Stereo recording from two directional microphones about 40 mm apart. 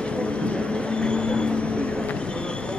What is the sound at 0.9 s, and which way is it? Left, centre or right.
Train, left.